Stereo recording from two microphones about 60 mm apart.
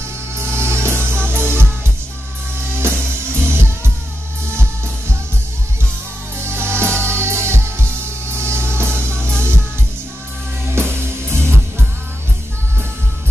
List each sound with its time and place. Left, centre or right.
0.4 s music: right
3.3 s music: right
6.4 s music: right
10.7 s music: right